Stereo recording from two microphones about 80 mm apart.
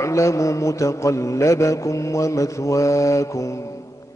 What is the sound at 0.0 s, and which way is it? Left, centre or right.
Mantra, left.